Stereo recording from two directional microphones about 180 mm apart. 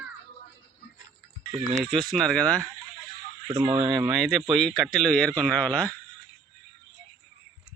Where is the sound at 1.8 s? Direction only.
Centre (ahead or behind).